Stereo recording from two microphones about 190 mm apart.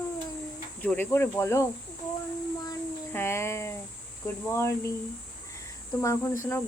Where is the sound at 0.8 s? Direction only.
10° left (ahead or behind).